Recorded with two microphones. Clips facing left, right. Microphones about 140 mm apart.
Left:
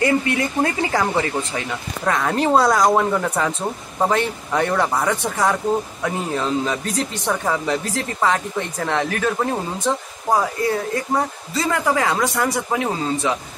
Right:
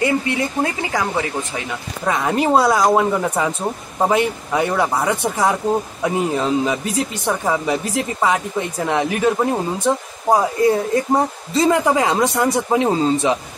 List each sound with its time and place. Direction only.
0.0 s speech: 20° right (ahead or behind)
0.9 s speech: 5° right (ahead or behind); by 13.4 s 25° right (ahead or behind)